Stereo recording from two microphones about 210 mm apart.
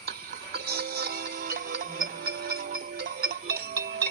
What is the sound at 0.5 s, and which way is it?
Music, 50° right (ahead or behind).